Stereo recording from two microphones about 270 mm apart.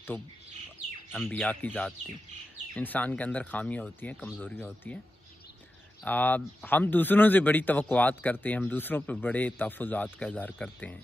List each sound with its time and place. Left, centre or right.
1.1 s speech: centre
6.0 s speech: centre